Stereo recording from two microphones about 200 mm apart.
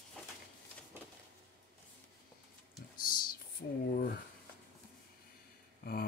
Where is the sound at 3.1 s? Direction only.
45° left (ahead or behind).